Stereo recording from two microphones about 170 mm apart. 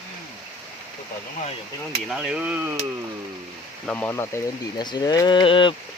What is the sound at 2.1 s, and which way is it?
Speech, 5° right (ahead or behind).